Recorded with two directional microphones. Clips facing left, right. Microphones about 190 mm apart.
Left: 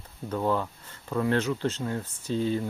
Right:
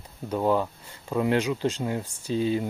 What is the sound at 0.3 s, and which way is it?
Speech, 15° right (ahead or behind).